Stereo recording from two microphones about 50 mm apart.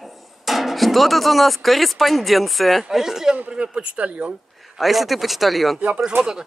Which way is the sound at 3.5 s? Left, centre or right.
Right.